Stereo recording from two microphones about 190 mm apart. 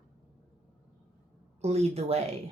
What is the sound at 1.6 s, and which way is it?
Speech, 35° right (ahead or behind).